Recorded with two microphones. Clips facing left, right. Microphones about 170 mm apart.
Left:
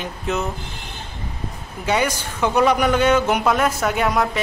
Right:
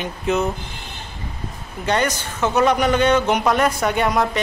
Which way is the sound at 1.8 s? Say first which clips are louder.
Even; 10° left (ahead or behind).